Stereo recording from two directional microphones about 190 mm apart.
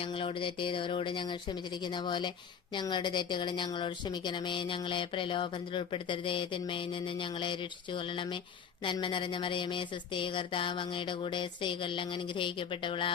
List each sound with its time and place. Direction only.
0.0 s speech: 30° left (ahead or behind)